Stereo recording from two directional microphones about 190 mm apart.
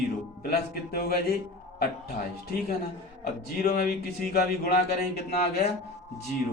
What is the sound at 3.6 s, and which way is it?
Speech, 50° left (ahead or behind).